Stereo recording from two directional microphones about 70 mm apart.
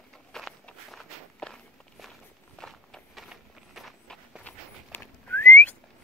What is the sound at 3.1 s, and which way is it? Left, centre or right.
Walk, centre.